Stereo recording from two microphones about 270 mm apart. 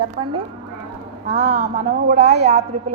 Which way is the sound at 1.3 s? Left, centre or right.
Right.